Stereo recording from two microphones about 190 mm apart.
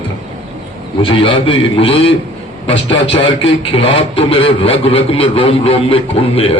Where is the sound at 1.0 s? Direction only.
30° left (ahead or behind).